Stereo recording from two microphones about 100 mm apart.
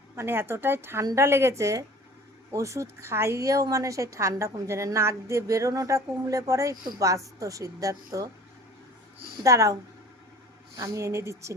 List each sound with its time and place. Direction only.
0.2 s a woman's voice: 25° right (ahead or behind)
9.4 s a woman's voice: 35° right (ahead or behind)
10.8 s a woman's voice: 35° right (ahead or behind)